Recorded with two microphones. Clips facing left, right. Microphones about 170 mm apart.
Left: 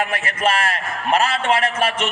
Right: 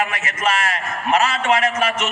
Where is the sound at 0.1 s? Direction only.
30° left (ahead or behind).